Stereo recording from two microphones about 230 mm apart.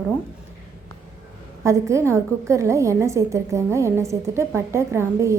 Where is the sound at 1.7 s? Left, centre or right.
Centre.